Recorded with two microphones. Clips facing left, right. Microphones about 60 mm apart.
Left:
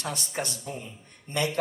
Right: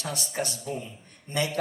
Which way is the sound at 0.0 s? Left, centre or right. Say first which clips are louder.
Right 1 dB; left.